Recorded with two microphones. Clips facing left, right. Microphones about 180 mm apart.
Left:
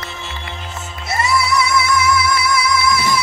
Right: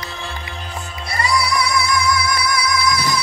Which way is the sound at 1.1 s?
25° left (ahead or behind).